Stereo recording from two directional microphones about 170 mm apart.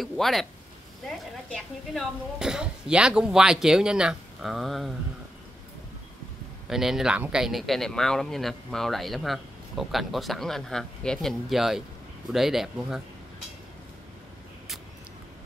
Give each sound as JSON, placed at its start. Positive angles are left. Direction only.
{"t": 0.0, "sound": "speech", "side_deg": 0}
{"t": 6.7, "sound": "speech", "side_deg": 0}